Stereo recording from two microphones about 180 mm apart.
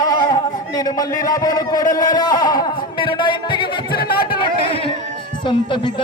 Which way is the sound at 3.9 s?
55° left (ahead or behind).